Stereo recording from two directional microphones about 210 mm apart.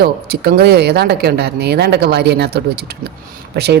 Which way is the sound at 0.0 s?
50° right (ahead or behind).